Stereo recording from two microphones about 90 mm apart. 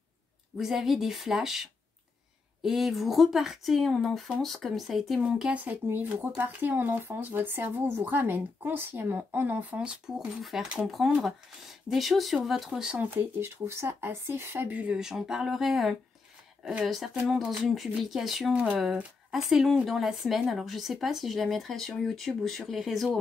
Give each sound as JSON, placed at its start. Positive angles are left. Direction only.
{"t": 0.6, "sound": "speech", "side_deg": -5}
{"t": 13.2, "sound": "speech", "side_deg": -30}
{"t": 18.5, "sound": "speech", "side_deg": -15}
{"t": 19.3, "sound": "speech", "side_deg": 0}